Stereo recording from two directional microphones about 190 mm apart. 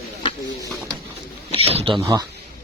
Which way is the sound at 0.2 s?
25° left (ahead or behind).